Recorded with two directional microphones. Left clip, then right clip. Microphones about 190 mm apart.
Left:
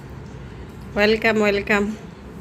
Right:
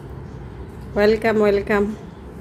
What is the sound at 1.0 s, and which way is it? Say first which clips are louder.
Speech: right 1 dB; 15° right (ahead or behind).